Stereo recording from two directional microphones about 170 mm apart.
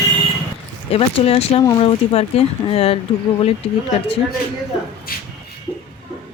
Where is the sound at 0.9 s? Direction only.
35° left (ahead or behind).